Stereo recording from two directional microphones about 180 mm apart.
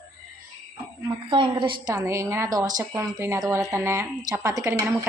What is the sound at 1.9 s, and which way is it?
Speech, 15° right (ahead or behind).